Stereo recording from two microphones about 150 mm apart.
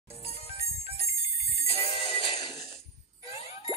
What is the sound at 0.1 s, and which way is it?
Music, 45° left (ahead or behind).